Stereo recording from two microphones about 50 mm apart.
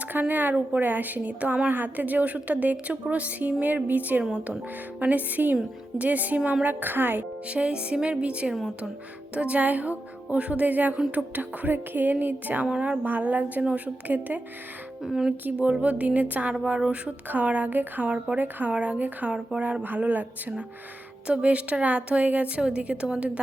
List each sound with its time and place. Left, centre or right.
0.1 s a woman's voice: right
7.4 s a woman's voice: right
12.6 s a woman's voice: centre
13.1 s a woman's voice: right
15.0 s speech: centre
15.8 s a woman's voice: right
18.0 s a woman's voice: right
18.9 s a woman's voice: right
19.3 s a woman's voice: right